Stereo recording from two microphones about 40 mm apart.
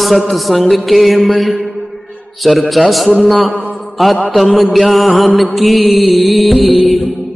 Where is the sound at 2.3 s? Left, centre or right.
Centre.